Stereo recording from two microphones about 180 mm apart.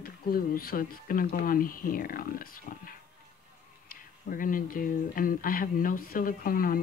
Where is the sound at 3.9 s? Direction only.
50° left (ahead or behind).